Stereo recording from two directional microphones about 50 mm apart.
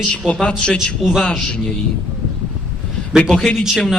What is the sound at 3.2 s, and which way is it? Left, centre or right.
Speech, centre.